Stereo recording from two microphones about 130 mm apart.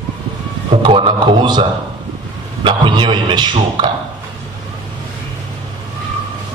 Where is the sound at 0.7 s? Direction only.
40° right (ahead or behind).